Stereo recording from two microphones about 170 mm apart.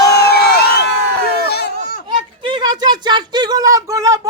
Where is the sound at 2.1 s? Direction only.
25° right (ahead or behind).